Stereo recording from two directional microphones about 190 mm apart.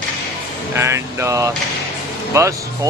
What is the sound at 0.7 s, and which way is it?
Speech, 15° right (ahead or behind).